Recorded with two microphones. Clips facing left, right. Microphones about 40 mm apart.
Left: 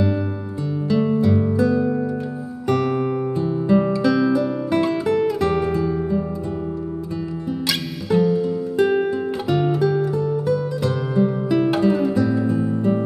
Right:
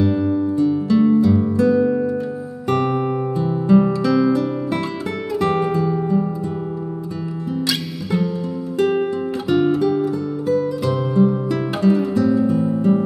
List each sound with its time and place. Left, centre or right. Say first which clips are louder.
0.0 s music: right 5 dB; centre
1.2 s music: right 2 dB; centre
1.7 s music: right 4 dB; centre
3.4 s music: right 3 dB; centre
8.1 s music: left 5 dB; centre
11.1 s music: even; centre